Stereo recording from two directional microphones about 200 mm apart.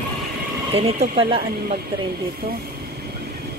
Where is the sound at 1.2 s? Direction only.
30° right (ahead or behind).